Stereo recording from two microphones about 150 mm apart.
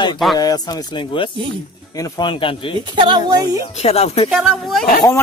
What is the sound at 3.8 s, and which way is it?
Speech, 45° left (ahead or behind).